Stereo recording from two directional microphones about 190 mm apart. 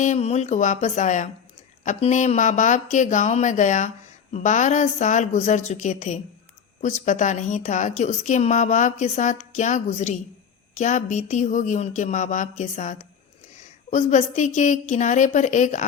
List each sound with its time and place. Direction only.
0.0 s speech: 35° left (ahead or behind)